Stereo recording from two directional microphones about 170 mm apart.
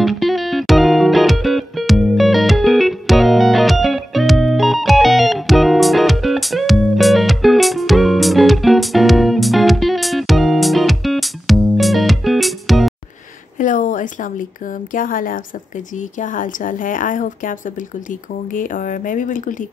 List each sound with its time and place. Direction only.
0.0 s music: centre (ahead or behind)
13.6 s a sound: 50° left (ahead or behind)
14.9 s a woman's voice: 55° left (ahead or behind)